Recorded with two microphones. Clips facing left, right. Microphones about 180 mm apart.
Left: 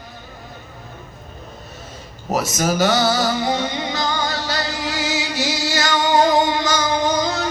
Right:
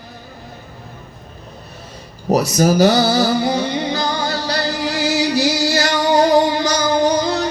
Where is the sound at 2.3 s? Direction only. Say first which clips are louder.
Right 6 dB; 35° right (ahead or behind).